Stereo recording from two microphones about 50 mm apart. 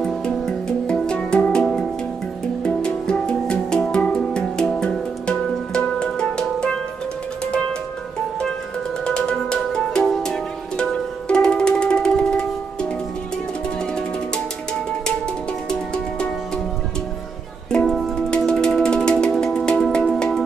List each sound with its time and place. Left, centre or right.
0.0 s music: centre
9.0 s music: centre
13.9 s music: centre
18.1 s music: centre